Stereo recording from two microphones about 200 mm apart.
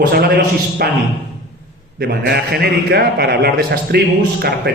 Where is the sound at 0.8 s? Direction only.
50° right (ahead or behind).